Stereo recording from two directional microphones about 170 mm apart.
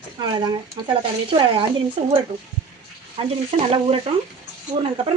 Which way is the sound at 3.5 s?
35° right (ahead or behind).